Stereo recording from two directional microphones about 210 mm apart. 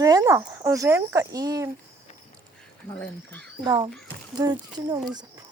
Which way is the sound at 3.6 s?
20° right (ahead or behind).